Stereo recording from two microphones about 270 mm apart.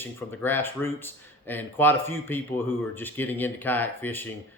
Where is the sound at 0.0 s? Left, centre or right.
Centre.